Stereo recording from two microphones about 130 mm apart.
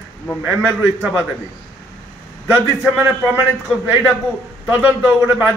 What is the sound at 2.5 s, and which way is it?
Speech, 15° right (ahead or behind).